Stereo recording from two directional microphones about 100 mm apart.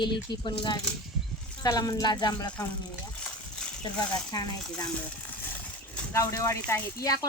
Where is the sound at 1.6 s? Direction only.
35° left (ahead or behind).